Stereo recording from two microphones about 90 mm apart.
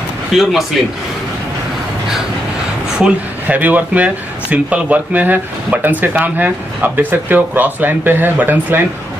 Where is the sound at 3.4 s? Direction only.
20° right (ahead or behind).